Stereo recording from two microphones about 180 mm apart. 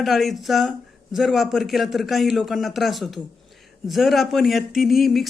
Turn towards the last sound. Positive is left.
turn(degrees=0)  # may be behind; listen again after turning